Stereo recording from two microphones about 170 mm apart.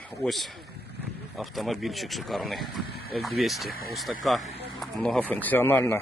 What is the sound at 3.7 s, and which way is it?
Speech, 65° left (ahead or behind).